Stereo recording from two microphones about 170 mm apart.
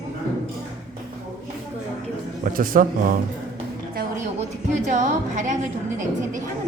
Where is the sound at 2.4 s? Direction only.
55° right (ahead or behind).